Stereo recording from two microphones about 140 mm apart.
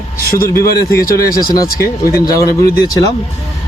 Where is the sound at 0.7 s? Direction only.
90° left.